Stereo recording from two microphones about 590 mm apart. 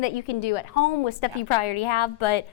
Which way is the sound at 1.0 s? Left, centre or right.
Left.